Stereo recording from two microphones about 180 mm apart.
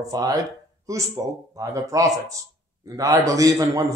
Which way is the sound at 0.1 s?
20° right (ahead or behind).